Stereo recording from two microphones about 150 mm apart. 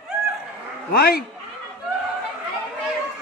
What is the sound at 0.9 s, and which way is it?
Speech, 90° left.